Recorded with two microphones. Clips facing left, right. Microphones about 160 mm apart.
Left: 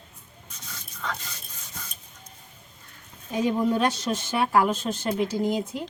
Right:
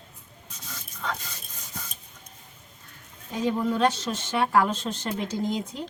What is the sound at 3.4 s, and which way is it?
Speech, 10° left (ahead or behind).